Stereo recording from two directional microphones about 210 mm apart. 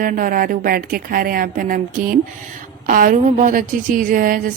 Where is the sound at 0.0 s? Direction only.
40° right (ahead or behind).